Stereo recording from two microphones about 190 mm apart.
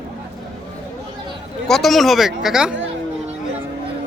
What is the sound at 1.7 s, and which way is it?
Speech, centre (ahead or behind).